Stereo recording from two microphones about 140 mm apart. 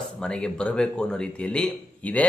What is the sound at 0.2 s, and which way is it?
A man's voice, 5° left (ahead or behind).